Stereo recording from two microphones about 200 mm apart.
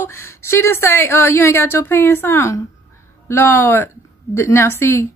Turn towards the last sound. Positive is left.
turn(degrees=10)  # may be behind; listen again after turning